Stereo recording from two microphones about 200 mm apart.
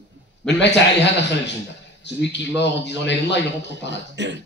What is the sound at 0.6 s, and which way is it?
A man's voice, 60° left (ahead or behind).